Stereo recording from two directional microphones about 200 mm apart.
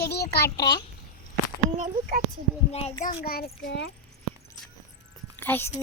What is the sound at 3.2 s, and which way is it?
Speech, 50° left (ahead or behind).